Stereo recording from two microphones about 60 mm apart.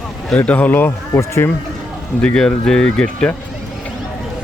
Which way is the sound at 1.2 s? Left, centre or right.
Left.